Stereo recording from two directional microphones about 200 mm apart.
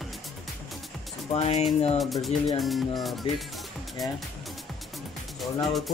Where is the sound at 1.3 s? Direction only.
30° left (ahead or behind).